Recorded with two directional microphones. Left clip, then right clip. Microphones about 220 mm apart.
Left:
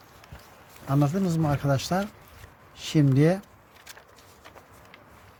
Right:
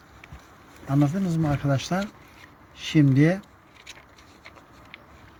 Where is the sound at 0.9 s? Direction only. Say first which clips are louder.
Right 1 dB; 25° left (ahead or behind).